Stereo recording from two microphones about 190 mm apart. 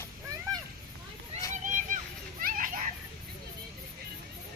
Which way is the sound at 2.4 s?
45° right (ahead or behind).